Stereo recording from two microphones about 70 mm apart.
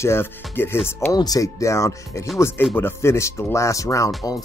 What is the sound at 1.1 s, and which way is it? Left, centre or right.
Speech, left.